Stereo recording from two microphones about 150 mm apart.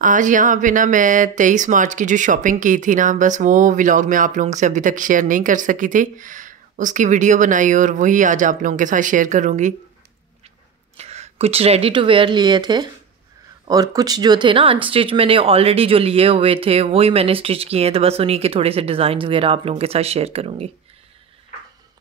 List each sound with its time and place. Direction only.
0.0 s speech: 60° right (ahead or behind)
11.0 s speech: 45° right (ahead or behind)